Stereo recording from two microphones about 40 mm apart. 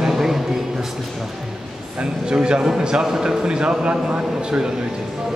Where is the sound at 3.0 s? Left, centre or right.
Centre.